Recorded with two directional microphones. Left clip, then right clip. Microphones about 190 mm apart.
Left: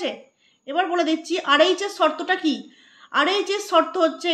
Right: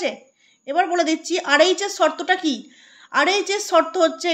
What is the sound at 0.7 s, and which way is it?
A woman's voice, 35° right (ahead or behind).